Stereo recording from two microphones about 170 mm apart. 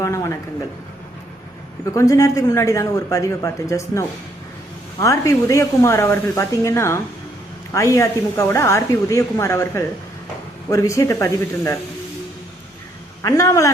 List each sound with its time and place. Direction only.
0.0 s a woman's voice: 15° left (ahead or behind)
1.8 s a woman's voice: 20° left (ahead or behind)
13.2 s speech: 20° left (ahead or behind)